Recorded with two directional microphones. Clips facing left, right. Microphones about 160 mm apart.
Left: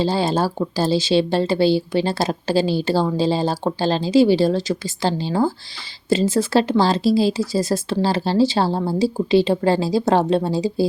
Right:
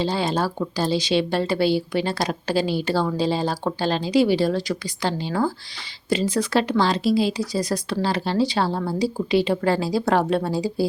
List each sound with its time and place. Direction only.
0.0 s speech: 30° left (ahead or behind)